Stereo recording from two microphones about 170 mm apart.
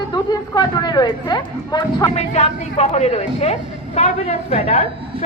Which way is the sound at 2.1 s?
40° left (ahead or behind).